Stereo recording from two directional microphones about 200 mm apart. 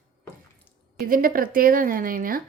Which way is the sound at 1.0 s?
45° right (ahead or behind).